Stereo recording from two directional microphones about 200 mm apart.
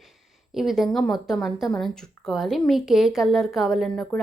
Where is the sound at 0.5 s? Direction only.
Centre (ahead or behind).